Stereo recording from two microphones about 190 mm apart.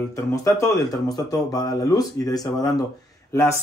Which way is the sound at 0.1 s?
15° left (ahead or behind).